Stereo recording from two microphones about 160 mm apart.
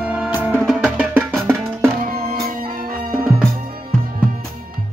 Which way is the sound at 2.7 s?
65° right (ahead or behind).